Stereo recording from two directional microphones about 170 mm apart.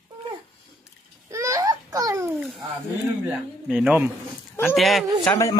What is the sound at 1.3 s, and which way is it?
Babbling, 20° right (ahead or behind).